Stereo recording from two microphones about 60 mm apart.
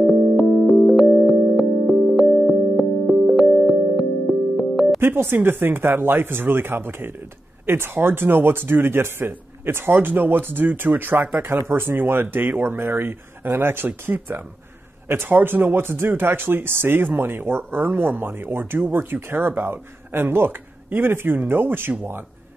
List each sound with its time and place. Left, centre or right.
0.0 s music: centre
5.0 s speech: right